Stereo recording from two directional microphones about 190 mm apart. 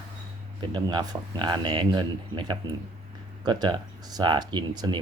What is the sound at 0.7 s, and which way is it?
Speech, 20° right (ahead or behind).